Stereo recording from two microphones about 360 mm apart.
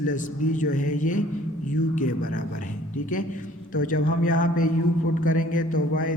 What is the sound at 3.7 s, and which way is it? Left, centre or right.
Mantra, left.